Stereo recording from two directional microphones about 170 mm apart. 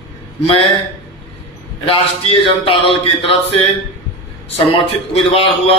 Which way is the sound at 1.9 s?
30° left (ahead or behind).